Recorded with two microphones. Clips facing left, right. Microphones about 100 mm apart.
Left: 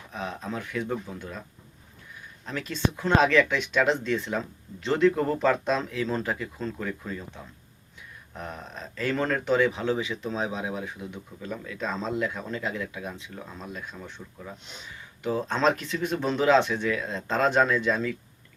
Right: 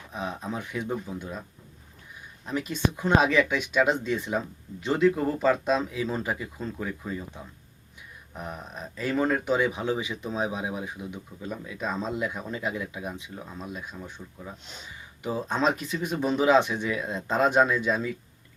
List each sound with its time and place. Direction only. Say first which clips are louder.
0.1 s speech: right 1 dB; 15° right (ahead or behind)
8.4 s speech: right 1 dB; 10° right (ahead or behind)